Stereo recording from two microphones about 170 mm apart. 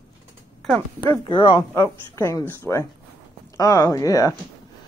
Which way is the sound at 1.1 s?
30° left (ahead or behind).